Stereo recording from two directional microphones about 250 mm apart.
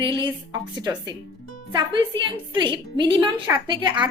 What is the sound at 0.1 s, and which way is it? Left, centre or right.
A woman's voice, centre.